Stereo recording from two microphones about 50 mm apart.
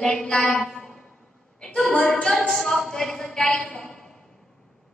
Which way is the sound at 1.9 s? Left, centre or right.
Centre.